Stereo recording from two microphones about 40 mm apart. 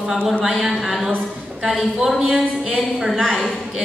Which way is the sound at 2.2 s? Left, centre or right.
Right.